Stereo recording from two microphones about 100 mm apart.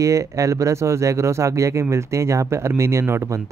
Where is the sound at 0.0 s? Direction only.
30° right (ahead or behind).